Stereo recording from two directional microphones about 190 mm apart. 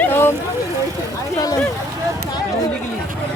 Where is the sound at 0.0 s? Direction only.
10° left (ahead or behind).